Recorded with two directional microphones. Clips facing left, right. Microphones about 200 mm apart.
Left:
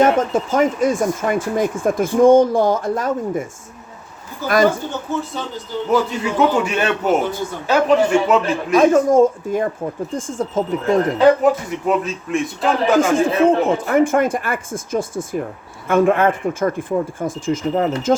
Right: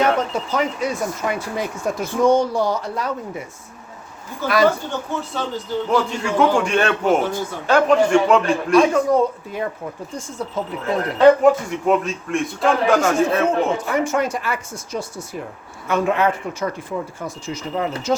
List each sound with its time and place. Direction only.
0.0 s speech: 45° left (ahead or behind)
4.4 s speech: 45° left (ahead or behind)
5.9 s a man's voice: 5° left (ahead or behind)
8.7 s speech: 45° left (ahead or behind)
11.2 s a man's voice: centre (ahead or behind)
13.8 s speech: 50° left (ahead or behind)